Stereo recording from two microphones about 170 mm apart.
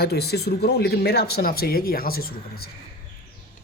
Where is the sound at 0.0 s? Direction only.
70° left (ahead or behind).